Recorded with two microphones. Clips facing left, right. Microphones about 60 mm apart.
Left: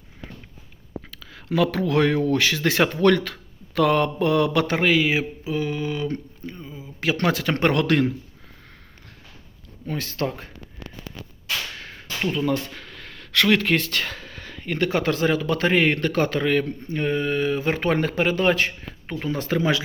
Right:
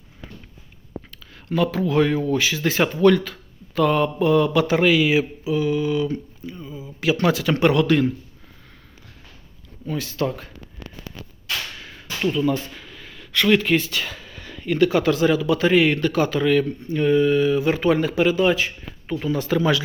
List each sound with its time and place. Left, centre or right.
1.5 s speech: left
9.8 s speech: left
11.8 s whip: left
12.2 s speech: left
19.2 s speech: left